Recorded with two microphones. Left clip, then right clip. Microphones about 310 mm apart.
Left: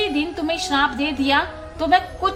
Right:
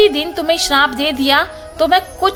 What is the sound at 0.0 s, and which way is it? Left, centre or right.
A woman's voice, right.